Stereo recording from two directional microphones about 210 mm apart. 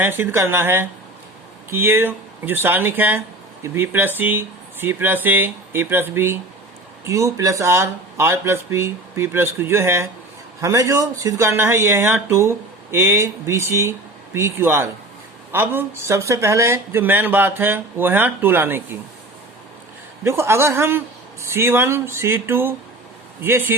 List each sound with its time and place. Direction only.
0.0 s speech: 10° right (ahead or behind)
20.2 s speech: 10° right (ahead or behind)